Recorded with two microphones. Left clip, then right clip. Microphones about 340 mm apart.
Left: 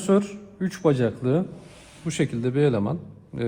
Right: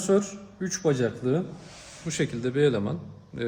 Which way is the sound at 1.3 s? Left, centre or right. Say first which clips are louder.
Left 3 dB; centre.